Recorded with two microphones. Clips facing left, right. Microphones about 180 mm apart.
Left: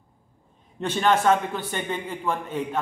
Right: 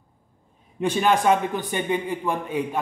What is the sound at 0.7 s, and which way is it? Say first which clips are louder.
A man's voice: right 1 dB; 10° right (ahead or behind).